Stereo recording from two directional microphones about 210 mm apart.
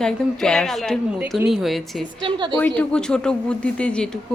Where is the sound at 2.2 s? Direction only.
25° right (ahead or behind).